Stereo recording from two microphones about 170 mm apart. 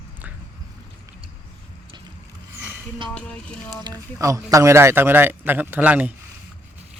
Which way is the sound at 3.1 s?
5° left (ahead or behind).